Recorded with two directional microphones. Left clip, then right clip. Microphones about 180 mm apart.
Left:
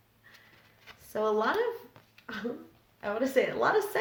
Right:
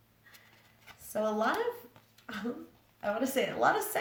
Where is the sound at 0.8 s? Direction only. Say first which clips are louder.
Left 2 dB; 20° left (ahead or behind).